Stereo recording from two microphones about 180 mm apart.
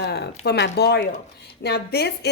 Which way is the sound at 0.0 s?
65° left (ahead or behind).